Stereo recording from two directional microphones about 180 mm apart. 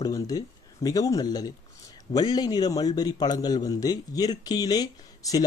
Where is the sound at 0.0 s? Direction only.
20° left (ahead or behind).